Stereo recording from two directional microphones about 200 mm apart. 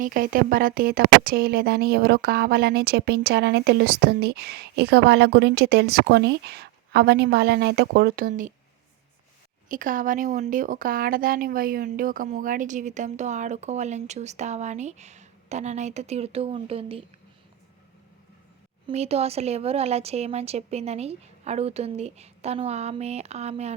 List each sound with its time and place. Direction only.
0.0 s speech: 45° right (ahead or behind)
9.6 s speech: 40° right (ahead or behind)
18.9 s speech: 30° right (ahead or behind)